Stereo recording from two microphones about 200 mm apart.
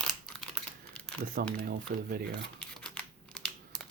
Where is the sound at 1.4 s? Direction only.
50° right (ahead or behind).